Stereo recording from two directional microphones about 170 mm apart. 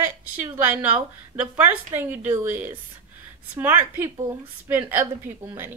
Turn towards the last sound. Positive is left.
turn(degrees=-10)  # may be behind; listen again after turning